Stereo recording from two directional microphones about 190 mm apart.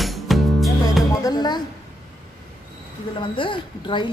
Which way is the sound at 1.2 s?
20° left (ahead or behind).